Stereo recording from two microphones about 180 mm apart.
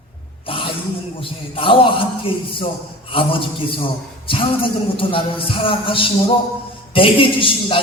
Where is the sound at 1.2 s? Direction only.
30° left (ahead or behind).